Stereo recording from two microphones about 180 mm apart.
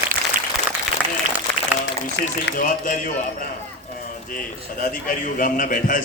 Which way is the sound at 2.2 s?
75° left (ahead or behind).